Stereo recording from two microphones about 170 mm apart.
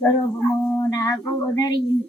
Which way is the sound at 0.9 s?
20° left (ahead or behind).